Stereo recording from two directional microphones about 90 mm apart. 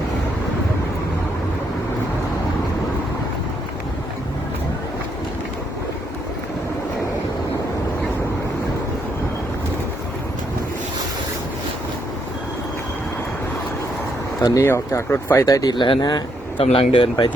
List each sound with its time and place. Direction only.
14.6 s speech: 30° left (ahead or behind)
15.4 s speech: 45° left (ahead or behind)
15.7 s speech: 60° left (ahead or behind)